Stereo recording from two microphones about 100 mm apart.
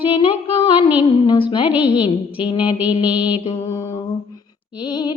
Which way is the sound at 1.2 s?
55° left (ahead or behind).